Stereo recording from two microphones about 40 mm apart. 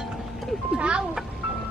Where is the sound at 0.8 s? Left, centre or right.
Right.